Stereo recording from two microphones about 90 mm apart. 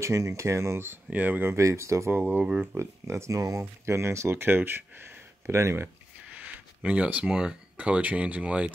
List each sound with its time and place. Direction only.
0.0 s speech: 35° right (ahead or behind)
2.1 s speech: 20° right (ahead or behind)
6.3 s speech: 15° right (ahead or behind)